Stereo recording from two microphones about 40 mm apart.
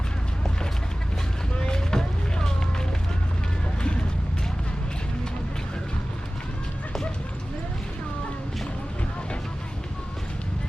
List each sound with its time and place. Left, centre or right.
1.5 s vehicle: centre